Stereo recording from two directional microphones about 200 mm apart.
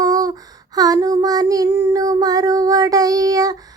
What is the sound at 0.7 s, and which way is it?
Child singing, 20° right (ahead or behind).